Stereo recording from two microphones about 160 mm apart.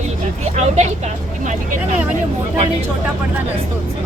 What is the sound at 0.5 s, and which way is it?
Speech, 45° right (ahead or behind).